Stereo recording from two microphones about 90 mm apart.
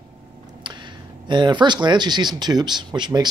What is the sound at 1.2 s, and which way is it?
Speech, 55° right (ahead or behind).